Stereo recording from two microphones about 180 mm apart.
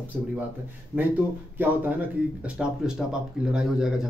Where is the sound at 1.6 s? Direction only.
10° right (ahead or behind).